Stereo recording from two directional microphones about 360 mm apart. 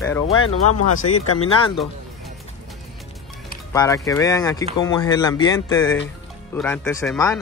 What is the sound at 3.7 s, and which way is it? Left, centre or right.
Speech, centre.